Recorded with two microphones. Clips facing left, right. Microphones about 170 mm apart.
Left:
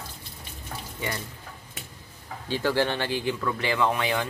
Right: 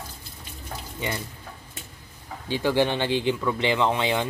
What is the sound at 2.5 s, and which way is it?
Speech, 15° right (ahead or behind).